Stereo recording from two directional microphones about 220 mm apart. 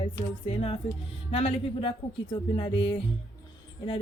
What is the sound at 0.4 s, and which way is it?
Speech, 25° left (ahead or behind).